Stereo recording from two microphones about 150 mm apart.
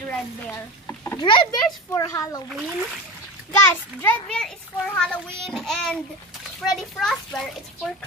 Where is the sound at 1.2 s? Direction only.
30° left (ahead or behind).